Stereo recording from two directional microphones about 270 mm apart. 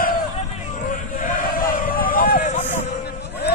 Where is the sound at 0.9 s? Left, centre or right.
Left.